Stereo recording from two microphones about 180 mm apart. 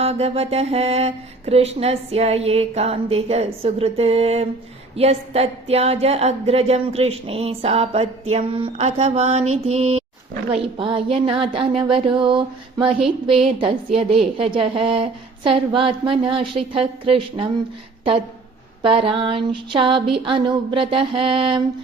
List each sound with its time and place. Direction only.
0.0 s a woman's voice: 35° right (ahead or behind)
18.8 s a woman's voice: 30° right (ahead or behind)